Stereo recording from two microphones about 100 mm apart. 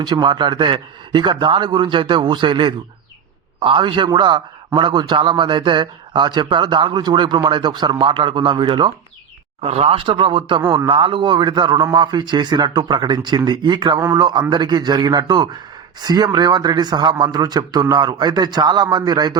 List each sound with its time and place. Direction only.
0.0 s a man's voice: 50° right (ahead or behind)
9.6 s a man's voice: 90° right; by 19.4 s 45° right (ahead or behind)